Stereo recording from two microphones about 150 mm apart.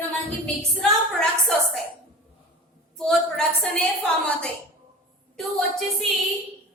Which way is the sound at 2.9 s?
5° left (ahead or behind).